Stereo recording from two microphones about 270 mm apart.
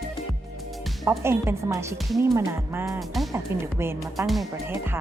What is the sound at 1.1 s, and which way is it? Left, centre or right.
Speech, centre.